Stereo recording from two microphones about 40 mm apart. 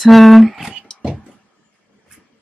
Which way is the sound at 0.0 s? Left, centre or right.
Centre.